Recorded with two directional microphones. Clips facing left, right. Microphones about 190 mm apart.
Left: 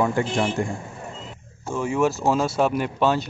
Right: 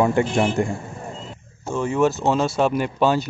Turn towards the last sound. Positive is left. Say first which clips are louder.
# right 2 dB
turn(degrees=0)  # may be behind; listen again after turning